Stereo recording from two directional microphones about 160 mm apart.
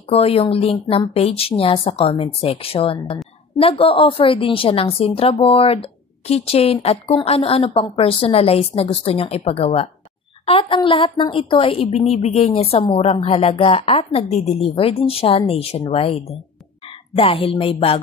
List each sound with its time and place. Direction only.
0.1 s a woman's voice: 40° left (ahead or behind)